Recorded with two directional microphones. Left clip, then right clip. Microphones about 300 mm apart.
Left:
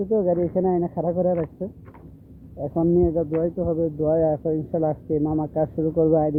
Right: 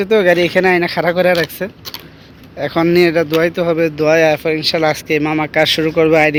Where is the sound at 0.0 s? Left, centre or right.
Right.